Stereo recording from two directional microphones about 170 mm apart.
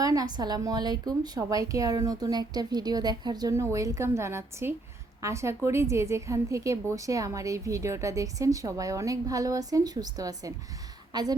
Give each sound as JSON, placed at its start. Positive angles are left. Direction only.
{"t": 0.0, "sound": "a woman's voice", "side_deg": -20}